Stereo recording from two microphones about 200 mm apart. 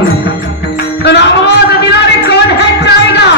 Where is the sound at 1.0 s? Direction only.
60° left (ahead or behind).